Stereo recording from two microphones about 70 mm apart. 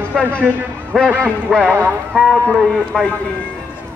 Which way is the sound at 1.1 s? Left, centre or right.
Centre.